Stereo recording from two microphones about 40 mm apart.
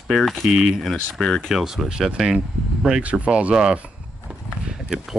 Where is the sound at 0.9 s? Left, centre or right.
Centre.